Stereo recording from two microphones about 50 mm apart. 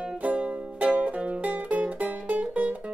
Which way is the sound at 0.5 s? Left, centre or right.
Right.